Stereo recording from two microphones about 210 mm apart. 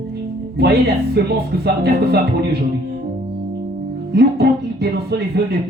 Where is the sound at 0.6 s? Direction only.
50° right (ahead or behind).